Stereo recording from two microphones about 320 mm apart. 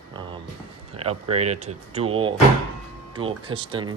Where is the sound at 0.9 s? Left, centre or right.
Centre.